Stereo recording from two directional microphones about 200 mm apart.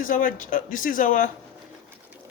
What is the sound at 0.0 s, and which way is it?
Speech, 45° left (ahead or behind).